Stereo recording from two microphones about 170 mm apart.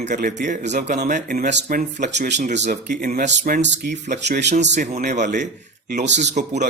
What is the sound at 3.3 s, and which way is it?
Speech, 75° right (ahead or behind).